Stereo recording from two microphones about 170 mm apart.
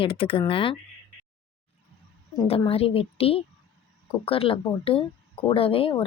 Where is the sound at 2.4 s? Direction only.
35° left (ahead or behind).